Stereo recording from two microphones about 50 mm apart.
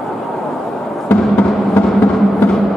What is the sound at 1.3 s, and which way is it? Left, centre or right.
Music, left.